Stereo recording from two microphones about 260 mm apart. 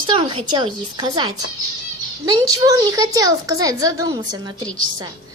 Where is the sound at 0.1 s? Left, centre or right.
Centre.